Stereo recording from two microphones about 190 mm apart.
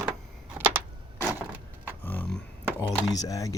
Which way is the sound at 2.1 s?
5° left (ahead or behind).